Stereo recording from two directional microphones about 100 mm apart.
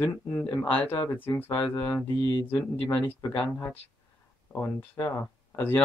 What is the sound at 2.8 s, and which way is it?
Speech, 15° left (ahead or behind).